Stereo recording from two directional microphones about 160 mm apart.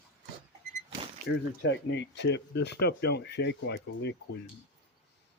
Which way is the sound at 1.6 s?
90° left.